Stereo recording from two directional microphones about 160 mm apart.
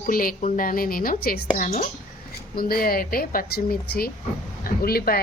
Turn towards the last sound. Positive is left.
turn(degrees=70)  # may be behind; listen again after turning